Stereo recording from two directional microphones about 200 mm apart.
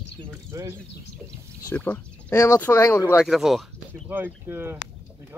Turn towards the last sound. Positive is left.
turn(degrees=-10)  # may be behind; listen again after turning